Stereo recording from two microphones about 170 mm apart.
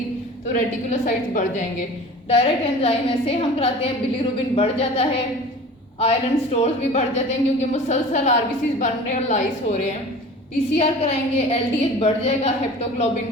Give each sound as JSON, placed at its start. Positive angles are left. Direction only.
{"t": 0.5, "sound": "a woman's voice", "side_deg": 50}
{"t": 2.3, "sound": "a woman's voice", "side_deg": 35}